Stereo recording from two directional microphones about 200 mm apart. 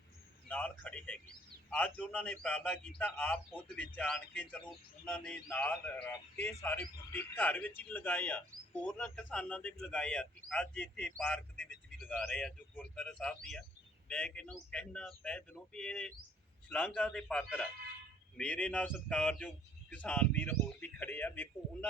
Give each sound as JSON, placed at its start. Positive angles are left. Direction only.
{"t": 0.4, "sound": "a man's voice", "side_deg": 5}